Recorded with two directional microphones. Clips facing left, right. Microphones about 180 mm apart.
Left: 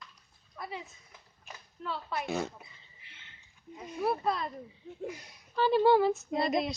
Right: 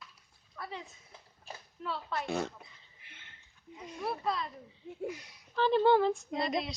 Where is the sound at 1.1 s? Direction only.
30° right (ahead or behind).